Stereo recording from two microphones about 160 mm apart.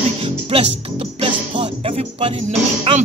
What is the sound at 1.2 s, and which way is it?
Speech, 35° right (ahead or behind).